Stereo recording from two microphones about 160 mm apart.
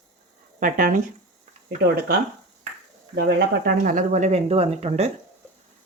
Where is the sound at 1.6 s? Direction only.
75° right (ahead or behind).